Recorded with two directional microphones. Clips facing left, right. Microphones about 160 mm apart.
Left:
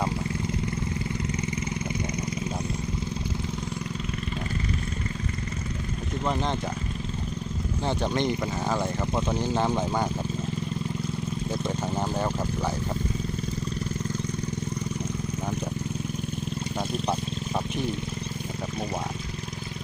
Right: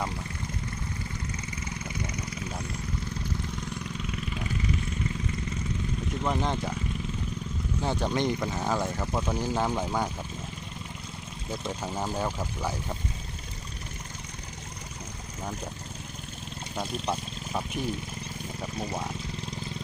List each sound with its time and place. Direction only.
6.2 s speech: 10° right (ahead or behind)
7.9 s speech: 10° right (ahead or behind)
9.1 s speech: 20° left (ahead or behind)
9.6 s speech: centre (ahead or behind)